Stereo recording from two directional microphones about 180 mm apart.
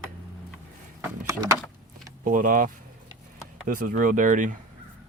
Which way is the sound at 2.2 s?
50° right (ahead or behind).